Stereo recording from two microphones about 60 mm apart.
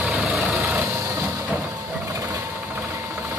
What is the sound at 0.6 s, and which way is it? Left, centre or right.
Vehicle, right.